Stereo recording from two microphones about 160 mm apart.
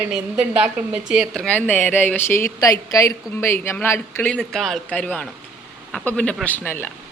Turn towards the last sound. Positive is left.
turn(degrees=15)  # may be behind; listen again after turning